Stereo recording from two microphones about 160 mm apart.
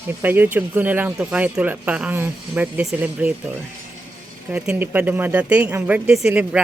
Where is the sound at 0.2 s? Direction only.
10° right (ahead or behind).